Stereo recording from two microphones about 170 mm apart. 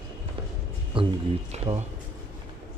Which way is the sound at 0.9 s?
30° right (ahead or behind).